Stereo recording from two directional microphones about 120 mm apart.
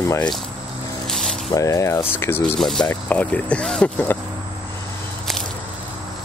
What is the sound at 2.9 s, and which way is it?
Speech, 15° left (ahead or behind).